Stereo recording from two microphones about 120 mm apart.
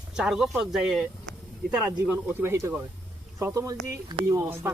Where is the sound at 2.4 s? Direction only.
20° right (ahead or behind).